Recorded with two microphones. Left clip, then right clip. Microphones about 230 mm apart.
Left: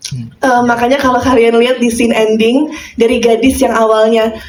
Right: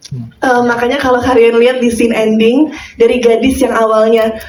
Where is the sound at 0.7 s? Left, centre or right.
Left.